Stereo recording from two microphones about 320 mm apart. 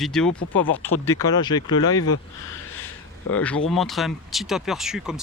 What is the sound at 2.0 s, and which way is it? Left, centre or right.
Speech, left.